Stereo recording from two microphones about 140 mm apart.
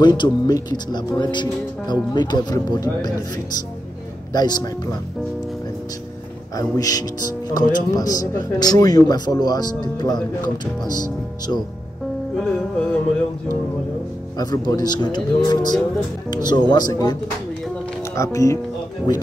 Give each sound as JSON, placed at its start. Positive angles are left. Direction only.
{"t": 0.0, "sound": "speech", "side_deg": 30}
{"t": 4.3, "sound": "speech", "side_deg": 30}
{"t": 6.5, "sound": "speech", "side_deg": 25}
{"t": 12.4, "sound": "music", "side_deg": 5}
{"t": 14.3, "sound": "speech", "side_deg": 30}